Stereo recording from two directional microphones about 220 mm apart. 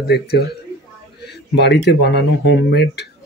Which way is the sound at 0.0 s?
45° left (ahead or behind).